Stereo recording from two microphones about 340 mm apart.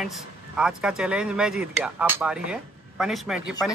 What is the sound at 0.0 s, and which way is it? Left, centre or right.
Speech, centre.